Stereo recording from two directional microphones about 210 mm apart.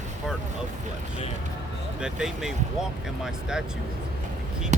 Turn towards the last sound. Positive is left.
turn(degrees=-35)  # may be behind; listen again after turning